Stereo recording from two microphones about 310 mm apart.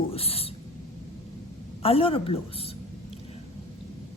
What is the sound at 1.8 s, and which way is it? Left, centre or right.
Speech, centre.